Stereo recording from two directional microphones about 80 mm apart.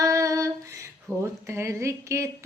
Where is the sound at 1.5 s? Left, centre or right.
Right.